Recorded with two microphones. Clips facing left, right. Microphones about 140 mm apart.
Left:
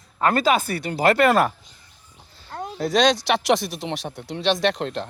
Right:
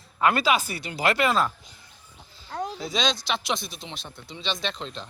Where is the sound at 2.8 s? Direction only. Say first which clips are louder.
Left 11 dB; 70° left (ahead or behind).